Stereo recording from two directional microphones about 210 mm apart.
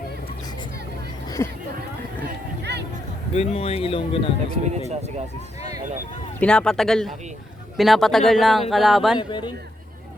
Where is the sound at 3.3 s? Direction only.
30° left (ahead or behind).